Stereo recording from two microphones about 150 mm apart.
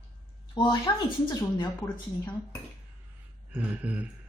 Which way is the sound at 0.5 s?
35° left (ahead or behind).